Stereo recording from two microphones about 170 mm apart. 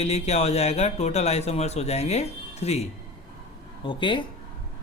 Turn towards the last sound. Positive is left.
turn(degrees=30)  # may be behind; listen again after turning